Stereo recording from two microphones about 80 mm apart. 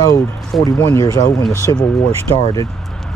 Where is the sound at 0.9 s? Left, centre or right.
Left.